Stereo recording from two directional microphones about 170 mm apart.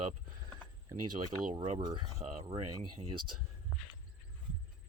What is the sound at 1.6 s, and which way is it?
Speech, 25° right (ahead or behind).